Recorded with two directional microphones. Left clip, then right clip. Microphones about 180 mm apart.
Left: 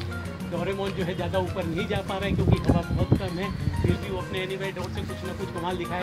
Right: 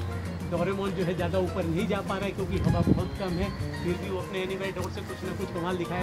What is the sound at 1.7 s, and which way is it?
Speech, 55° right (ahead or behind).